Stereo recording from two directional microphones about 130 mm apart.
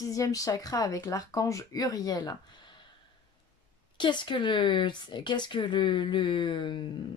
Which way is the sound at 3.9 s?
35° left (ahead or behind).